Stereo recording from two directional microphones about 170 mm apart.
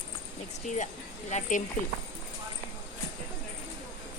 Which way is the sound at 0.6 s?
45° left (ahead or behind).